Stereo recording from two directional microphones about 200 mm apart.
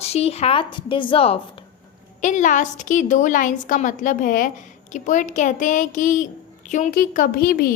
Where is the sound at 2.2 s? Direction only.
40° left (ahead or behind).